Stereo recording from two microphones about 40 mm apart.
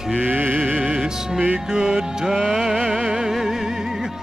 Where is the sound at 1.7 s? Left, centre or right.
Centre.